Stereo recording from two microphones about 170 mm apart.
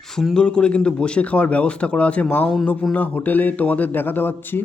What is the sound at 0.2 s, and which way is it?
Speech, 5° left (ahead or behind).